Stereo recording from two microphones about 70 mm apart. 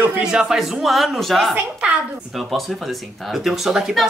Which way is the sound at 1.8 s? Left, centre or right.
Centre.